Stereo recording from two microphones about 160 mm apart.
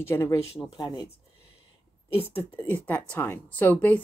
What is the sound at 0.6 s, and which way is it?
Speech, 25° left (ahead or behind).